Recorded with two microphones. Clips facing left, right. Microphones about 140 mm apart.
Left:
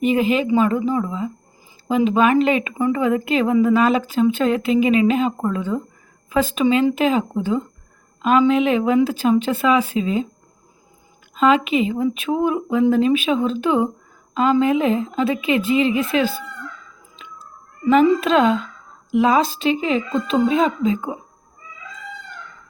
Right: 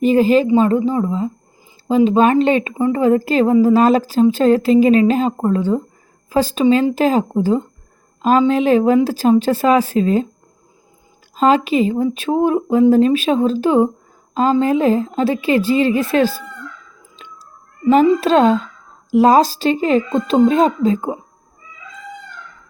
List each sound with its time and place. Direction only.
0.0 s a woman's voice: 35° right (ahead or behind)
11.3 s a woman's voice: 35° right (ahead or behind)
17.2 s a sound: 35° right (ahead or behind)
19.1 s a woman's voice: 40° right (ahead or behind)